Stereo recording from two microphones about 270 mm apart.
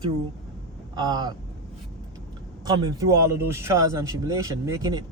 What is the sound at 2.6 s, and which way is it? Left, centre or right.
A man's voice, centre.